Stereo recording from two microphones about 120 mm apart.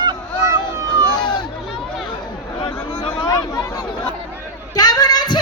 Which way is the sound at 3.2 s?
30° left (ahead or behind).